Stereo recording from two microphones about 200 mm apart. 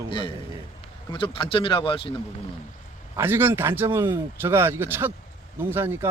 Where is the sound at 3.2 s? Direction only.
10° right (ahead or behind).